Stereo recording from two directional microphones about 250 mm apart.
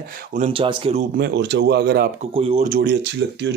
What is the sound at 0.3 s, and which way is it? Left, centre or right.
Speech, right.